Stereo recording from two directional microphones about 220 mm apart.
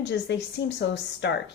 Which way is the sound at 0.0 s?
55° left (ahead or behind).